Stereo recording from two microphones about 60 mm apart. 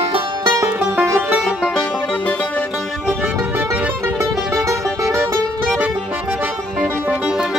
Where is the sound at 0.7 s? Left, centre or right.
Right.